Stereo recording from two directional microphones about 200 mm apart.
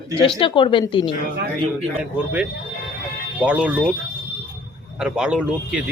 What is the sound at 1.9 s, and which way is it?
Speech, 5° right (ahead or behind).